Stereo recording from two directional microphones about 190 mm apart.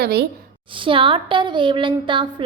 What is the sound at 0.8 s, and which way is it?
A woman's voice, 25° right (ahead or behind).